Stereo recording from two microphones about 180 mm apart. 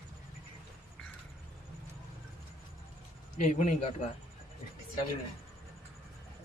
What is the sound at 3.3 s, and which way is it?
Speech, 40° left (ahead or behind).